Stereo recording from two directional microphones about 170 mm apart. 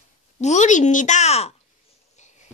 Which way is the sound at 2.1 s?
45° left (ahead or behind).